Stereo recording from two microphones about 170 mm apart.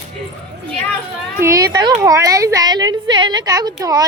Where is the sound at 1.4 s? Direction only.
20° right (ahead or behind).